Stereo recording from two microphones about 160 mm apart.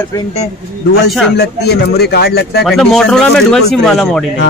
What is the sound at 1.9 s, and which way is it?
Speech, 90° left.